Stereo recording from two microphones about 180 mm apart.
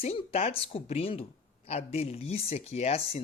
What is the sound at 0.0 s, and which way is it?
Speech, 35° left (ahead or behind).